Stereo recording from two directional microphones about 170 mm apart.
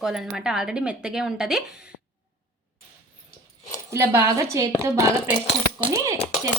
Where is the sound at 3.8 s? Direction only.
15° right (ahead or behind).